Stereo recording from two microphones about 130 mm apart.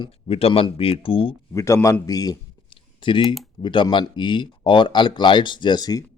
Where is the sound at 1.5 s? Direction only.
25° left (ahead or behind).